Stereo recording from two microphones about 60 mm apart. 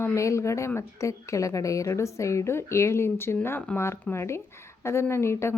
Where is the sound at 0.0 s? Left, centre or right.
Left.